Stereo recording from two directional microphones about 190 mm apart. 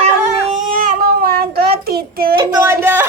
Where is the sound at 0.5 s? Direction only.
45° right (ahead or behind).